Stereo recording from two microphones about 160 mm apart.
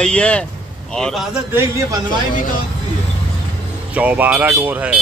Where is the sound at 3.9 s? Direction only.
10° right (ahead or behind).